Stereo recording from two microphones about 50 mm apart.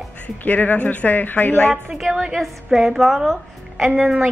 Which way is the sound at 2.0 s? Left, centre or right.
Centre.